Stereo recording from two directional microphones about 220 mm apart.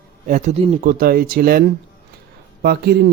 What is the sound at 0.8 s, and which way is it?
Speech, 45° right (ahead or behind).